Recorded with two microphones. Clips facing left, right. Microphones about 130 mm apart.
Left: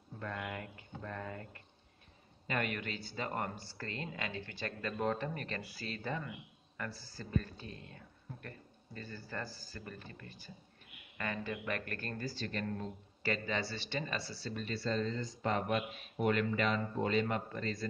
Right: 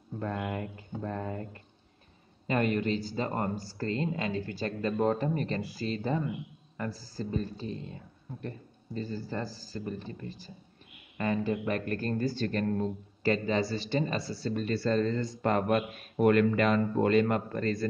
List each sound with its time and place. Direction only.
0.2 s speech: 30° right (ahead or behind)
12.3 s speech: 50° right (ahead or behind)
14.2 s speech: 50° right (ahead or behind)